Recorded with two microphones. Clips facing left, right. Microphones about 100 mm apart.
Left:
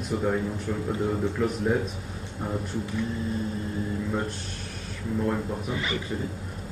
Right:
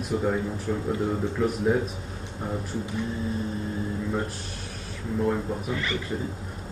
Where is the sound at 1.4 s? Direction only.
Centre (ahead or behind).